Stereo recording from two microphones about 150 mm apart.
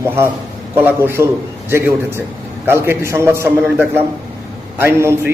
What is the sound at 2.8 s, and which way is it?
A man's voice, 15° right (ahead or behind).